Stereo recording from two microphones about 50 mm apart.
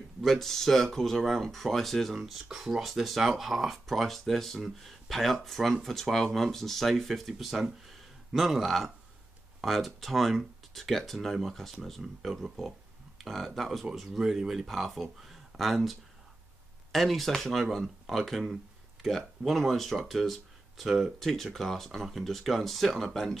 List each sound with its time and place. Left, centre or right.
0.2 s speech: centre